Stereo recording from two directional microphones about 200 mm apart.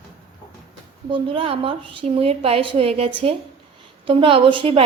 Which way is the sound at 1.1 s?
25° right (ahead or behind).